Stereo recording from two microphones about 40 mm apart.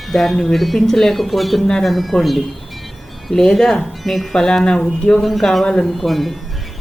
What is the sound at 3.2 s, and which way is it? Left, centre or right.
Speech, centre.